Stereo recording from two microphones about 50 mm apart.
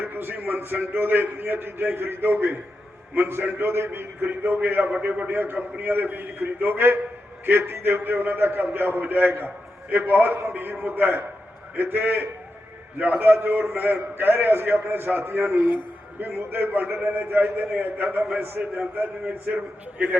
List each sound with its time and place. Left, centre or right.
0.0 s a man's voice: right
5.5 s a man's voice: right
18.6 s a man's voice: right
20.0 s a man's voice: right